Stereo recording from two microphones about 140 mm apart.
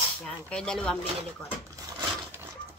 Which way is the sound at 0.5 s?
5° left (ahead or behind).